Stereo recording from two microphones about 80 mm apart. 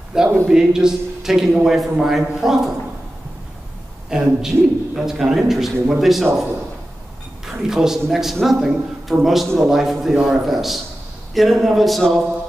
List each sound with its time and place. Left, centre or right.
0.1 s a man's voice: centre
4.1 s a man's voice: centre
7.6 s a man's voice: centre